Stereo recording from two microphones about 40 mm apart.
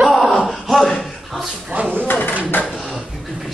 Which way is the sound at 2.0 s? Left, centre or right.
Left.